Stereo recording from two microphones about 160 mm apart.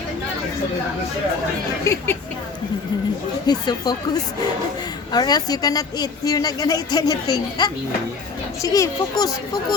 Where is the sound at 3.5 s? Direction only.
25° left (ahead or behind).